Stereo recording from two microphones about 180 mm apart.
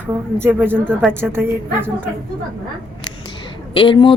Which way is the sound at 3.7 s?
30° left (ahead or behind).